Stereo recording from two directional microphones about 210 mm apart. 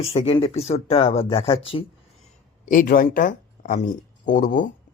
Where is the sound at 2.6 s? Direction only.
40° left (ahead or behind).